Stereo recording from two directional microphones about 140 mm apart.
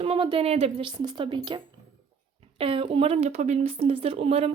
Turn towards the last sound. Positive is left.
turn(degrees=-45)  # may be behind; listen again after turning